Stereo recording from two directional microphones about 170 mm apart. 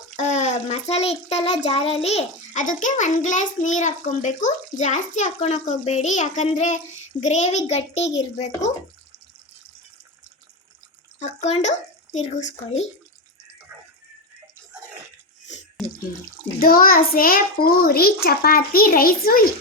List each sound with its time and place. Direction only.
0.2 s a child's voice: 45° left (ahead or behind)
11.2 s a child's voice: 40° left (ahead or behind)
16.6 s a child's voice: 60° left (ahead or behind)